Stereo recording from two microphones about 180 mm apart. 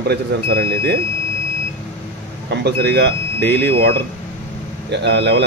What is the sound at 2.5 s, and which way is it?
A man's voice, 70° right (ahead or behind).